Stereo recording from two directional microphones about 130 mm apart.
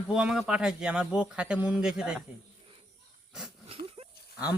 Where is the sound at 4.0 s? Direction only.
45° right (ahead or behind).